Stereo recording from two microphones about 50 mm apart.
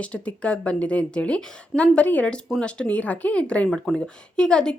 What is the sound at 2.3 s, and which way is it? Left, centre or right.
Speech, centre.